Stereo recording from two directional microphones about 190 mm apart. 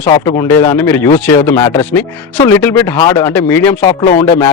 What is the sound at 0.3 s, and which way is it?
Speech, 15° left (ahead or behind).